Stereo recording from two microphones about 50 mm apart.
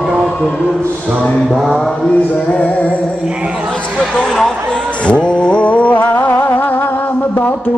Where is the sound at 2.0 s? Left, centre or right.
Left.